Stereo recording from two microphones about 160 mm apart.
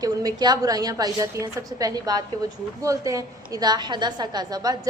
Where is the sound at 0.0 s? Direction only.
25° right (ahead or behind).